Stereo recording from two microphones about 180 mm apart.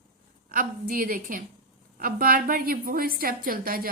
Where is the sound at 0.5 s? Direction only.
50° right (ahead or behind).